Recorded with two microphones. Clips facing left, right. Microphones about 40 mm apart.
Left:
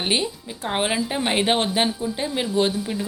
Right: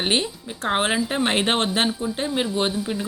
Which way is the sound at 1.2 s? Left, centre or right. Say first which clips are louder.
Left 2 dB; right.